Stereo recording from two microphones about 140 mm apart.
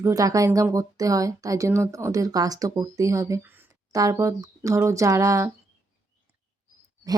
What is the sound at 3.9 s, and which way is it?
Speech, 25° right (ahead or behind).